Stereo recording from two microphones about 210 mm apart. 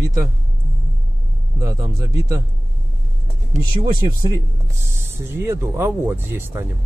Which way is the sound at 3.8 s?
20° right (ahead or behind).